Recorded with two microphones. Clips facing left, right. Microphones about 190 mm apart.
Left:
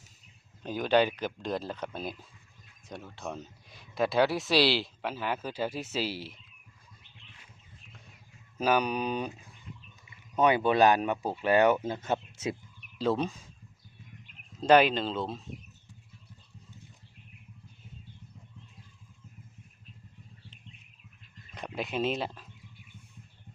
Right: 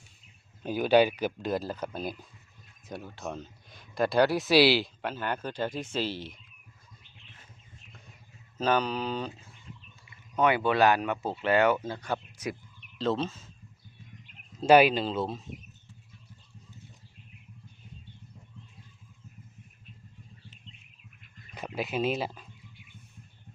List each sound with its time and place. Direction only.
0.6 s speech: 10° right (ahead or behind); by 6.4 s 5° left (ahead or behind)
8.5 s speech: 10° left (ahead or behind)
13.0 s speech: 10° left (ahead or behind)
14.7 s speech: 10° right (ahead or behind)
21.8 s speech: 5° right (ahead or behind)